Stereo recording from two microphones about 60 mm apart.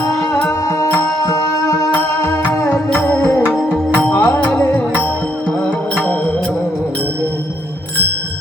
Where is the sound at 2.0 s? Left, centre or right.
Left.